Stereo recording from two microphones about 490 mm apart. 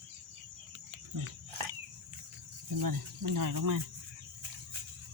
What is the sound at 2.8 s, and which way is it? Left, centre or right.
Speech, right.